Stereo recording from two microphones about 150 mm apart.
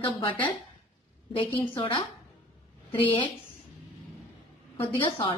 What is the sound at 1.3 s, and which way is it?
A woman's voice, 35° left (ahead or behind).